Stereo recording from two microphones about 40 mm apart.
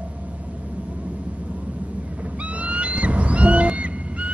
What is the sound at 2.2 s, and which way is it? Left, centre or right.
Owl, right.